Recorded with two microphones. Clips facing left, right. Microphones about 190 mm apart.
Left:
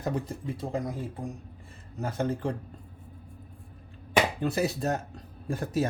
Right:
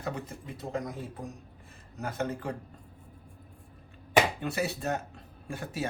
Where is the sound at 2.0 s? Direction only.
30° left (ahead or behind).